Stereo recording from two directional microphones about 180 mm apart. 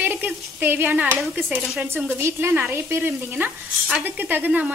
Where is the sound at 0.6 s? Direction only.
10° right (ahead or behind).